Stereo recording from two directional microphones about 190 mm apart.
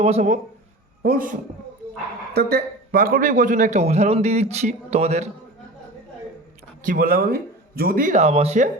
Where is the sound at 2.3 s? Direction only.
60° right (ahead or behind); by 5.3 s 35° right (ahead or behind).